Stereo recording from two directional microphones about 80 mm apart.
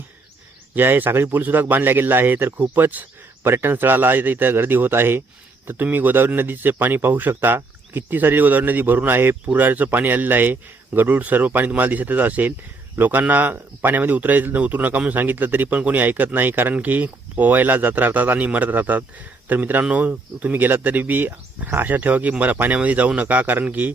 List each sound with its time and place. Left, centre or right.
0.8 s speech: right